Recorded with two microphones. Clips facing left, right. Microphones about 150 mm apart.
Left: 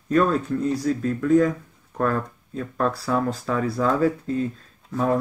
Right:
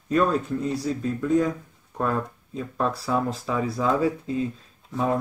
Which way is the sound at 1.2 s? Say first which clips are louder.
Left 4 dB; 20° right (ahead or behind).